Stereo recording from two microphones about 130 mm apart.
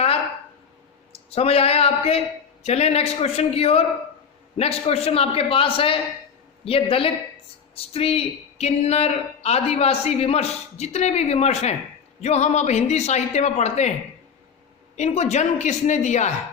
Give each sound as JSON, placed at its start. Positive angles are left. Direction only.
{"t": 1.4, "sound": "a man's voice", "side_deg": 50}
{"t": 14.9, "sound": "speech", "side_deg": 60}